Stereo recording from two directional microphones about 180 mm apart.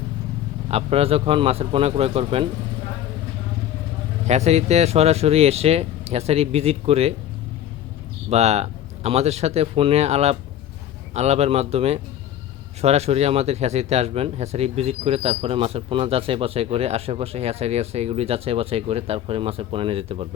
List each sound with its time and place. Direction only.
0.7 s speech: 35° right (ahead or behind)
4.3 s speech: 35° right (ahead or behind)
8.3 s speech: 35° right (ahead or behind)